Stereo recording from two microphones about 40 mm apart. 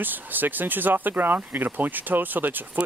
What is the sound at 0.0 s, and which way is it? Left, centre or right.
Speech, right.